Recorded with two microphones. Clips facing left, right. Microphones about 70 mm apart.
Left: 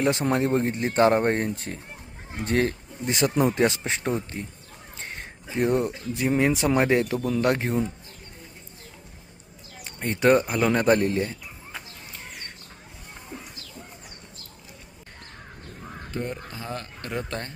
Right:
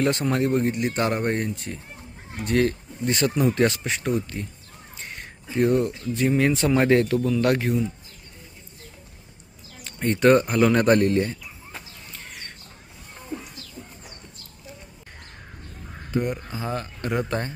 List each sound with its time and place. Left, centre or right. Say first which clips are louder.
0.0 s speech: right 1 dB; centre
4.9 s crow: left 1 dB; left
6.1 s speech: right 1 dB; centre
10.0 s speech: right 2 dB; centre
16.1 s speech: right 6 dB; centre